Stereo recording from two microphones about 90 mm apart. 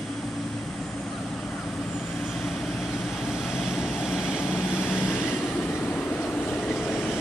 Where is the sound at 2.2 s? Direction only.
Centre (ahead or behind).